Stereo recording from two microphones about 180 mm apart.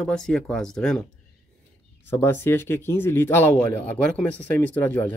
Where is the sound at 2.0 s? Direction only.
15° left (ahead or behind).